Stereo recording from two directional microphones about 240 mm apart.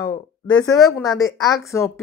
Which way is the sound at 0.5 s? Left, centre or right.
Centre.